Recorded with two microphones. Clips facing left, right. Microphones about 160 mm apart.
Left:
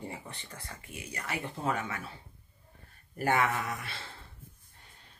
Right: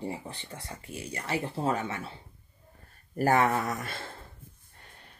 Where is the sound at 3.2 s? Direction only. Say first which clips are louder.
Right 5 dB; 40° right (ahead or behind).